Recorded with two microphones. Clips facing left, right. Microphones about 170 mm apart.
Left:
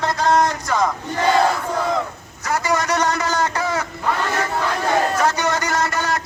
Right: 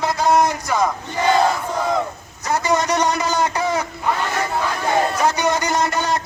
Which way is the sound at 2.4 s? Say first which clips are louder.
Right 2 dB; 20° right (ahead or behind).